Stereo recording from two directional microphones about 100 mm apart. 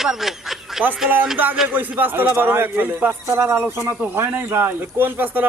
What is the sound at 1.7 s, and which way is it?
Speech, 20° right (ahead or behind).